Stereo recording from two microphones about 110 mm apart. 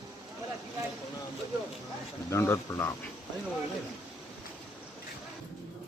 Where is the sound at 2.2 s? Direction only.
25° left (ahead or behind).